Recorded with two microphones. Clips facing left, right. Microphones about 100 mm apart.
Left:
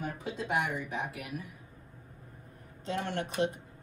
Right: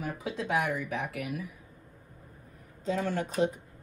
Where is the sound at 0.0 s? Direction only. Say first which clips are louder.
Right 2 dB; 85° right.